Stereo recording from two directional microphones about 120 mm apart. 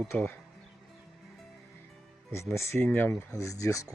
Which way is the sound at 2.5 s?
25° left (ahead or behind).